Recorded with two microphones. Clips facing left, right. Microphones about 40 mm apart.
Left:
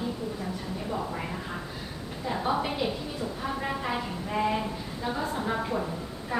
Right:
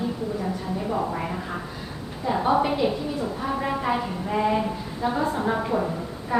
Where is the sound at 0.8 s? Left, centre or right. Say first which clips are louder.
Right 6 dB; right.